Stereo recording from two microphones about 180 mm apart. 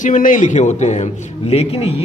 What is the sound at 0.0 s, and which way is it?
Speech, 45° left (ahead or behind).